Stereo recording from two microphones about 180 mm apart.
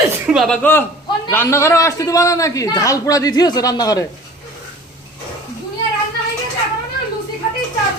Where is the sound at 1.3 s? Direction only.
15° left (ahead or behind).